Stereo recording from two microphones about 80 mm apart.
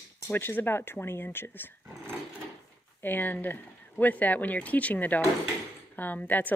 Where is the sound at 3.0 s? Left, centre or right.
Left.